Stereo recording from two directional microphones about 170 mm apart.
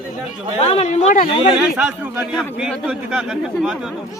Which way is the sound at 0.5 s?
35° left (ahead or behind).